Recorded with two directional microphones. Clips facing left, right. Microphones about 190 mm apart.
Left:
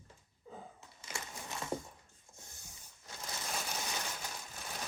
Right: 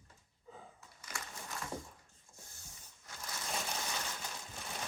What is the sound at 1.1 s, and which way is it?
Crushing, 25° left (ahead or behind).